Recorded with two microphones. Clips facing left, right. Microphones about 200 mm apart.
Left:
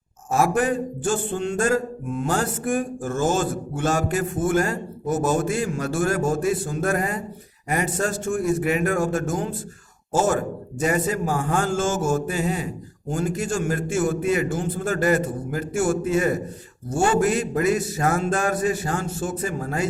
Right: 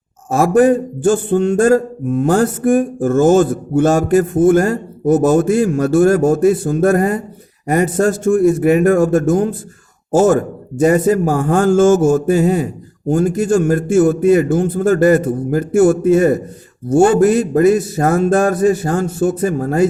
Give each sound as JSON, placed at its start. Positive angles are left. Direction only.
{"t": 0.3, "sound": "speech", "side_deg": -40}
{"t": 1.3, "sound": "a sound", "side_deg": -60}
{"t": 1.5, "sound": "a man's voice", "side_deg": -40}
{"t": 10.8, "sound": "speech", "side_deg": -40}
{"t": 11.4, "sound": "a man's voice", "side_deg": -50}
{"t": 14.5, "sound": "a man's voice", "side_deg": -55}